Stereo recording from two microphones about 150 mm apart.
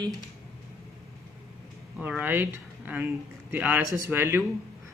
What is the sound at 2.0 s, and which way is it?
Speech, 10° right (ahead or behind).